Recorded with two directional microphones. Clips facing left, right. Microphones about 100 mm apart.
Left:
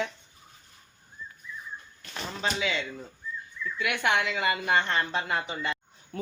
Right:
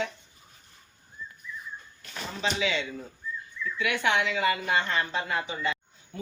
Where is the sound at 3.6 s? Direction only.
10° left (ahead or behind).